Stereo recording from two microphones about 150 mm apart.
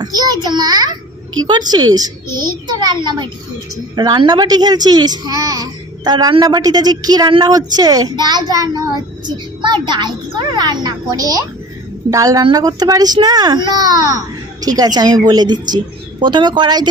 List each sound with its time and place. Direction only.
0.0 s a woman's voice: 25° right (ahead or behind)